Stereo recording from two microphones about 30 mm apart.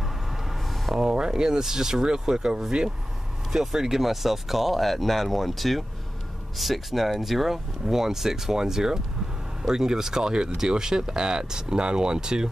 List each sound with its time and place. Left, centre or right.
0.0 s vehicle: centre
1.1 s speech: right